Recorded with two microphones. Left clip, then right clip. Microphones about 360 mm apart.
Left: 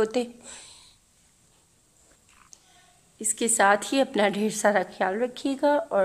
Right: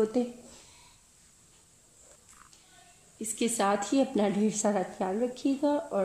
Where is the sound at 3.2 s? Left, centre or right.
Centre.